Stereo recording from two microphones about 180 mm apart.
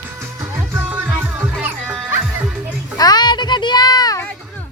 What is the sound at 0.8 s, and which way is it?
Music, 10° right (ahead or behind).